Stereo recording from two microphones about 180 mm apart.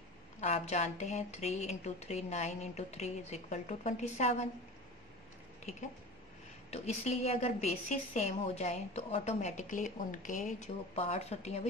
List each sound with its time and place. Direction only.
0.4 s a woman's voice: 40° left (ahead or behind)
6.7 s a woman's voice: 35° left (ahead or behind)